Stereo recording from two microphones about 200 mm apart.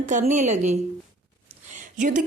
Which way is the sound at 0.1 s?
40° right (ahead or behind).